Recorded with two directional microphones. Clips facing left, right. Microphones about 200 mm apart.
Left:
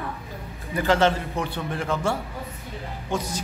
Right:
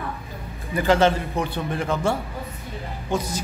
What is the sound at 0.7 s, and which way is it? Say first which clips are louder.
A man's voice: right 2 dB; 15° right (ahead or behind).